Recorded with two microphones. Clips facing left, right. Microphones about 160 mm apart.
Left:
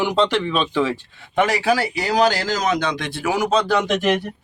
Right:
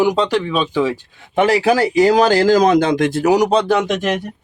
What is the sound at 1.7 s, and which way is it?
Speech, 45° right (ahead or behind).